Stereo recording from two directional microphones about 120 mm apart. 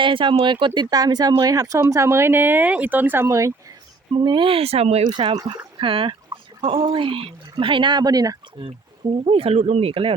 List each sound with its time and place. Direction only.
0.0 s speech: 45° right (ahead or behind); by 3.5 s 25° right (ahead or behind)
4.1 s speech: 45° right (ahead or behind); by 5.0 s 60° right (ahead or behind)
5.0 s speech: 35° right (ahead or behind)
9.2 s speech: 55° right (ahead or behind)